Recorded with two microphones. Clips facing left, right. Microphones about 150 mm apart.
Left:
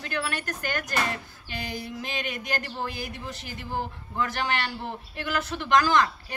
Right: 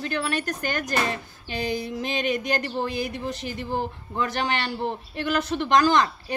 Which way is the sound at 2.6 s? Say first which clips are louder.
Right 6 dB; 25° right (ahead or behind).